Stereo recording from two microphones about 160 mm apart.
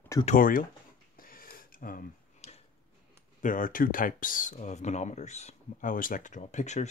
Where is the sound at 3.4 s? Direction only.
55° left (ahead or behind).